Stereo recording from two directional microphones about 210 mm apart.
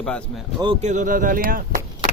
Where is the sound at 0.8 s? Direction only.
35° right (ahead or behind).